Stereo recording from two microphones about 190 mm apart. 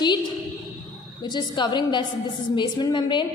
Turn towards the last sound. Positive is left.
turn(degrees=25)  # may be behind; listen again after turning